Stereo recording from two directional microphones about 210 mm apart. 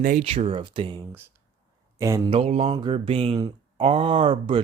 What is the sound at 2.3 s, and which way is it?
Mantra, 30° right (ahead or behind).